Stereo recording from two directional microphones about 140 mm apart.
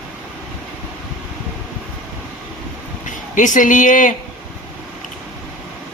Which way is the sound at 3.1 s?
65° left (ahead or behind).